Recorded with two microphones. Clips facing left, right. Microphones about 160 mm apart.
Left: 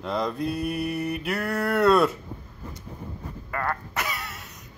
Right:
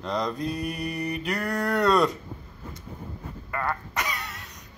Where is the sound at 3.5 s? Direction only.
Centre (ahead or behind).